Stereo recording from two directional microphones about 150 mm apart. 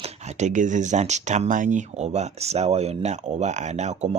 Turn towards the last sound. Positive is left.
turn(degrees=-50)  # may be behind; listen again after turning